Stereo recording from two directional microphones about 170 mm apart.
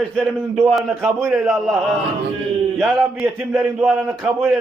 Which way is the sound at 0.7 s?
Centre (ahead or behind).